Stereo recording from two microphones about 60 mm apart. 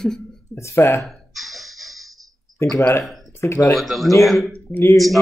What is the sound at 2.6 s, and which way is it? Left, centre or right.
Speech, left.